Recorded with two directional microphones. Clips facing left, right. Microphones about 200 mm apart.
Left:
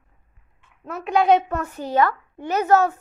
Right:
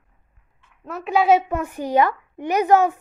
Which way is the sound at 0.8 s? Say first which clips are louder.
Even; centre (ahead or behind).